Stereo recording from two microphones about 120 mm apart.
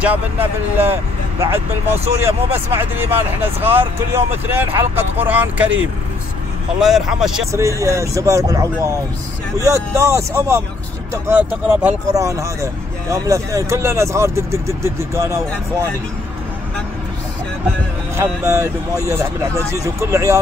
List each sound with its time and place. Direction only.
0.0 s speech: 15° right (ahead or behind)
2.2 s speech: 20° right (ahead or behind)
7.5 s speech: 25° right (ahead or behind)
18.1 s speech: 25° right (ahead or behind)